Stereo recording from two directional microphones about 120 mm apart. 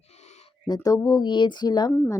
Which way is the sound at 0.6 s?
35° left (ahead or behind).